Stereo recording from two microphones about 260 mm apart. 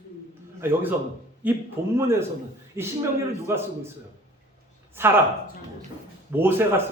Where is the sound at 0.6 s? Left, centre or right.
Centre.